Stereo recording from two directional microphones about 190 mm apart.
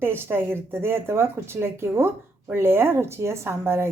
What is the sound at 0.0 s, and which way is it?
Speech, 10° right (ahead or behind).